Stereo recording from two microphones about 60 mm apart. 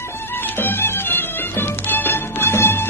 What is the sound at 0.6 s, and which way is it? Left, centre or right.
Music, left.